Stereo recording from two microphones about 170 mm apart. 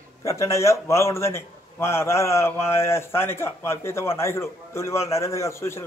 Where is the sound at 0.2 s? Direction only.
15° left (ahead or behind).